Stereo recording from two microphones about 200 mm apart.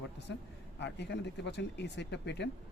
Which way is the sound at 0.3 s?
65° left (ahead or behind).